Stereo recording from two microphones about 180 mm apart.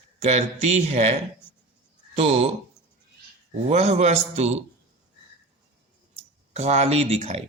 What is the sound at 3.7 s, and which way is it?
Speech, 35° right (ahead or behind).